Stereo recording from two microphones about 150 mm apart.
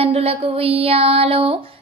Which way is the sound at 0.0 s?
40° right (ahead or behind).